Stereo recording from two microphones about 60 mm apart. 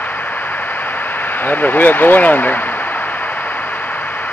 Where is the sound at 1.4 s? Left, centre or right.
Left.